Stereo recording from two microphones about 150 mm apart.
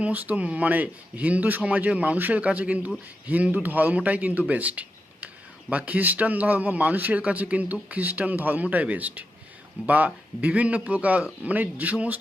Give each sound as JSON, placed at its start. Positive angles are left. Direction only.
{"t": 0.0, "sound": "speech", "side_deg": -10}